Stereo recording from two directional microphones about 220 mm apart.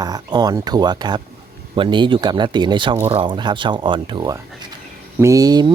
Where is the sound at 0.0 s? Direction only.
20° right (ahead or behind).